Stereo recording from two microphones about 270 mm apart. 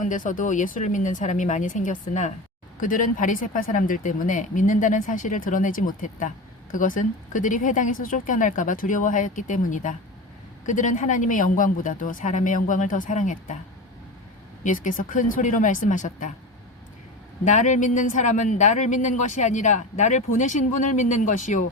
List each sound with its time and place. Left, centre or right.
0.0 s speech: left
14.6 s speech: left
17.4 s speech: left